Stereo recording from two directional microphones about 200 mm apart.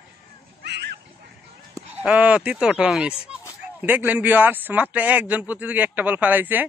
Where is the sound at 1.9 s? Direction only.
5° right (ahead or behind).